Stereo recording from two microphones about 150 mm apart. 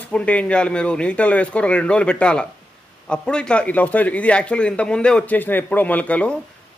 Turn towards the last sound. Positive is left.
turn(degrees=10)  # may be behind; listen again after turning